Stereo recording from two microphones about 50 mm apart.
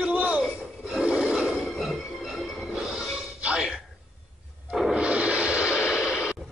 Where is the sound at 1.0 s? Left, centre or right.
Right.